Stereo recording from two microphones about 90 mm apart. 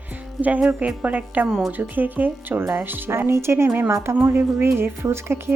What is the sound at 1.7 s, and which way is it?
A woman's voice, 20° right (ahead or behind).